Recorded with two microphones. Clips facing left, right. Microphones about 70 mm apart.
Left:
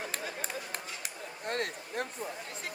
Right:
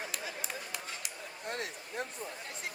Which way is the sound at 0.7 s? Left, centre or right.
Left.